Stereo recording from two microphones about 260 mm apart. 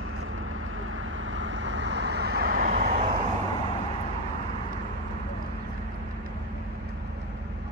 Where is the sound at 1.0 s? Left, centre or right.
Right.